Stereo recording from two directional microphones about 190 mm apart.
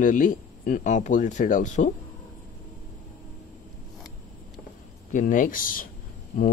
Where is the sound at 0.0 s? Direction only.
45° left (ahead or behind).